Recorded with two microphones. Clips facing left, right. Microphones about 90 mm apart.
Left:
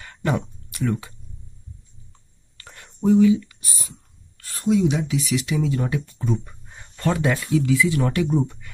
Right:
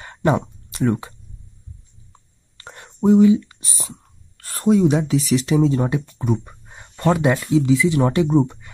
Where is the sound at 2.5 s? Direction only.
25° right (ahead or behind).